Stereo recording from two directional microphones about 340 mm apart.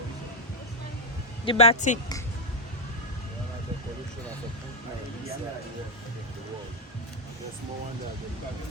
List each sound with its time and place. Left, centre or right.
1.5 s speech: centre